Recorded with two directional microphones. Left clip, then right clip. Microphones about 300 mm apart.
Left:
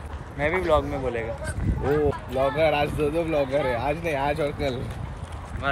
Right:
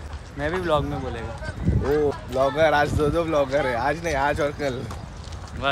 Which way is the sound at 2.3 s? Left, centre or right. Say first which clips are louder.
Right 3 dB; right.